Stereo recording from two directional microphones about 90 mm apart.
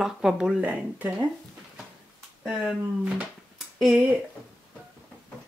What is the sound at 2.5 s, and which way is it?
Speech, 15° right (ahead or behind).